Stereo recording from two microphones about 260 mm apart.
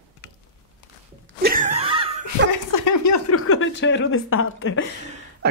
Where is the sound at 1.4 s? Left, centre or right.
Right.